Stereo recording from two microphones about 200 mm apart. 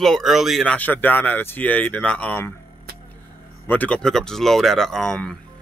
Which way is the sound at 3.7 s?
5° left (ahead or behind).